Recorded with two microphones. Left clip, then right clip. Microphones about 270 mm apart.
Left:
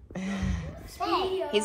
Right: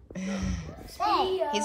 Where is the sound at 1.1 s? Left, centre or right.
Right.